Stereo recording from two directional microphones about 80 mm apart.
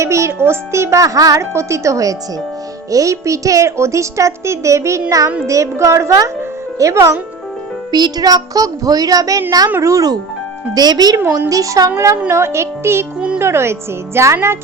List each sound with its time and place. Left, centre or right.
0.0 s a woman's voice: right
7.9 s a woman's voice: right
10.8 s speech: right
11.3 s a woman's voice: right
13.1 s a child's voice: centre
13.4 s a woman's voice: right